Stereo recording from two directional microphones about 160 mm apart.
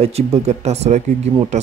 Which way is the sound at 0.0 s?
40° right (ahead or behind).